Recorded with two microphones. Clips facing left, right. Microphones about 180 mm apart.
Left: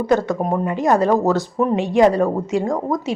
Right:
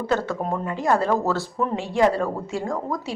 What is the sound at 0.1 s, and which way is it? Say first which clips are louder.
Speech: left 6 dB; 15° left (ahead or behind).